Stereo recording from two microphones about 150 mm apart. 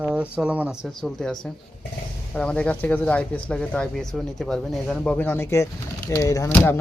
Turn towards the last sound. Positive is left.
turn(degrees=20)  # may be behind; listen again after turning